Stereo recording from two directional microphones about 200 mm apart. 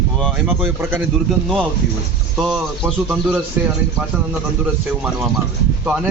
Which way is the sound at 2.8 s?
10° right (ahead or behind).